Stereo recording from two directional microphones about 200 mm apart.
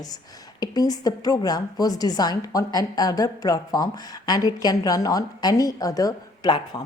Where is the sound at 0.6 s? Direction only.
20° left (ahead or behind).